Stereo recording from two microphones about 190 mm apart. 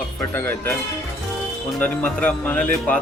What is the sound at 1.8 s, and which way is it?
Speech, 10° left (ahead or behind).